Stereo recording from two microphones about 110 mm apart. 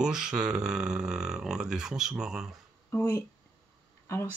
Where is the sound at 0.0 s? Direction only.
5° right (ahead or behind).